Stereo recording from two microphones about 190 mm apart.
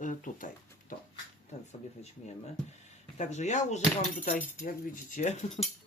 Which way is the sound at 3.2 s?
40° left (ahead or behind).